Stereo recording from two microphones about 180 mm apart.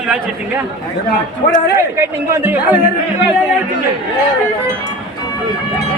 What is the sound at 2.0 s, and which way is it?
Speech, 10° right (ahead or behind).